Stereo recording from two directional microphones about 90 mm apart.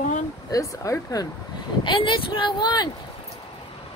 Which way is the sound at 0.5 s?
40° left (ahead or behind).